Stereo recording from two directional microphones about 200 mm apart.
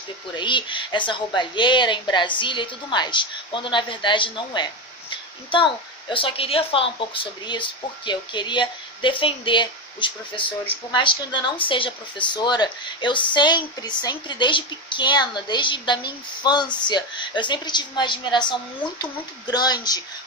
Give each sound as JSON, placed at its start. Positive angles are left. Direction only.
{"t": 0.3, "sound": "a woman's voice", "side_deg": 25}